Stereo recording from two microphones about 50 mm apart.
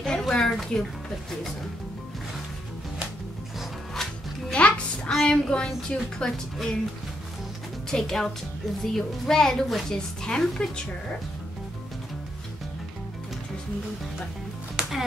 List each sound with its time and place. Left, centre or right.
0.0 s a sound: centre
3.9 s music: centre
4.6 s music: left
5.2 s a woman's voice: centre
7.9 s a woman's voice: centre
14.8 s music: centre